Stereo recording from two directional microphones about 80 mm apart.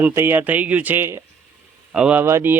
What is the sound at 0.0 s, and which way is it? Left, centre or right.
Speech, right.